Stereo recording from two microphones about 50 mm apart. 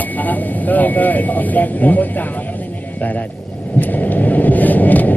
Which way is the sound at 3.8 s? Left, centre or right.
Left.